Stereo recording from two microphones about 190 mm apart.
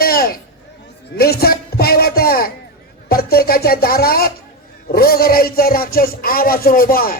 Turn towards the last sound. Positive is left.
turn(degrees=50)  # may be behind; listen again after turning